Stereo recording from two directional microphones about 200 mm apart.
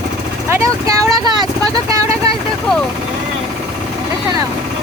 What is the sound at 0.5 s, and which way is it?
Vehicle, 15° right (ahead or behind).